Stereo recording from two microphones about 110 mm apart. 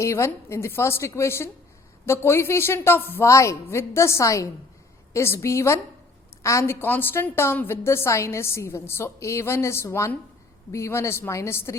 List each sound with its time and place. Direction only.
0.0 s a woman's voice: 25° left (ahead or behind)